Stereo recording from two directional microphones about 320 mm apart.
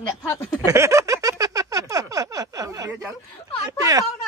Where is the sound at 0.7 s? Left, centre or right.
Centre.